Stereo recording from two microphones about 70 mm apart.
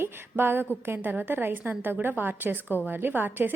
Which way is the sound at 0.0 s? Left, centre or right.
Right.